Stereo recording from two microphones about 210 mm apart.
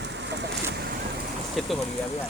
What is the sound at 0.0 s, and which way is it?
Vehicle, 55° right (ahead or behind).